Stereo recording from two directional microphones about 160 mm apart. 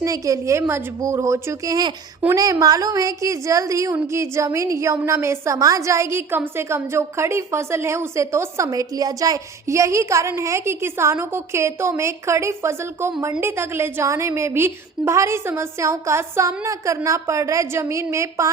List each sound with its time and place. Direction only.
0.0 s a woman's voice: 20° right (ahead or behind)